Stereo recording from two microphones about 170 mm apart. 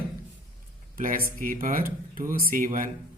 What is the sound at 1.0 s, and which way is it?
Speech, 55° right (ahead or behind).